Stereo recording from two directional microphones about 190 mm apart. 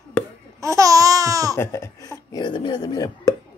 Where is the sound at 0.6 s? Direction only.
15° right (ahead or behind).